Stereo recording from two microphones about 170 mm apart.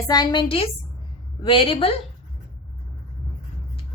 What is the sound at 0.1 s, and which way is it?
A woman's voice, 25° left (ahead or behind).